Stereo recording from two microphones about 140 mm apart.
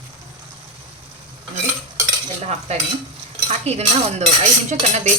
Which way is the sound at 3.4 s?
50° right (ahead or behind).